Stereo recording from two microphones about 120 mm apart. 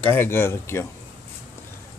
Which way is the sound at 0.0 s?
20° left (ahead or behind).